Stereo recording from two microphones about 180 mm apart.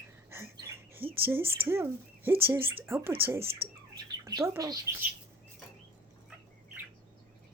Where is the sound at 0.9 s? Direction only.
10° right (ahead or behind).